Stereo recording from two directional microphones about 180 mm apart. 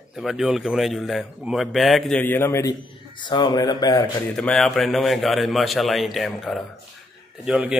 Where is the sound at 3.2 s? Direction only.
25° left (ahead or behind).